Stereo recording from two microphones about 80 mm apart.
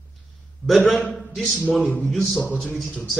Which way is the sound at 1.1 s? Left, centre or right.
Centre.